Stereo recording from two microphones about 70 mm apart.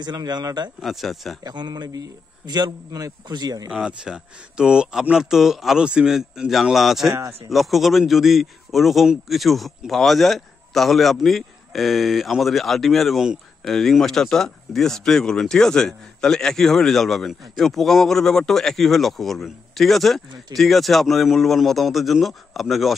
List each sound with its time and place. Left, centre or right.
0.0 s a man's voice: right
0.8 s speech: centre
1.4 s a man's voice: right
3.7 s speech: centre